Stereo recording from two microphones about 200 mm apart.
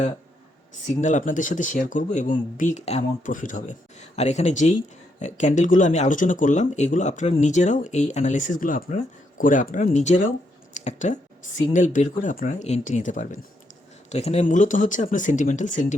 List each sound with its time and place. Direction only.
1.0 s speech: 40° left (ahead or behind)